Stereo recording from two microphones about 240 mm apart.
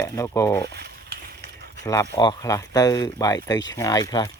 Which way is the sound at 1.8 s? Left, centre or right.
Centre.